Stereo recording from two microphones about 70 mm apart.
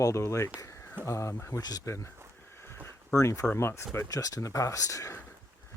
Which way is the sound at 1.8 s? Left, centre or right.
Left.